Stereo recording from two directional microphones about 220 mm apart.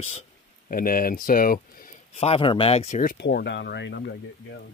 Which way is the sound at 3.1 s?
50° left (ahead or behind).